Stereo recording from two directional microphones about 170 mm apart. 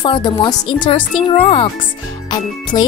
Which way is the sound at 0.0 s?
30° left (ahead or behind).